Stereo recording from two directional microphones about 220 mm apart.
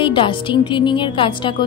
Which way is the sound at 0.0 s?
25° left (ahead or behind).